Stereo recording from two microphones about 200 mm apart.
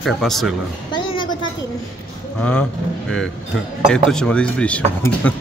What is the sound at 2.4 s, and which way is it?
Speech, 5° left (ahead or behind).